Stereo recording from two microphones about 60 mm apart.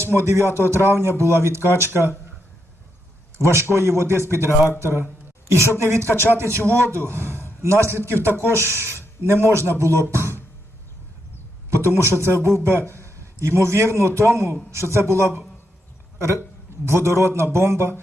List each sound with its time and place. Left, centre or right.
0.0 s a man's voice: right
3.3 s a man's voice: right
6.1 s speech: left
6.3 s a man's voice: right
10.1 s a sound: right
12.2 s a man's voice: right